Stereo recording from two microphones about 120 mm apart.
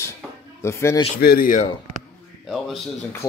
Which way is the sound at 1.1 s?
90° left.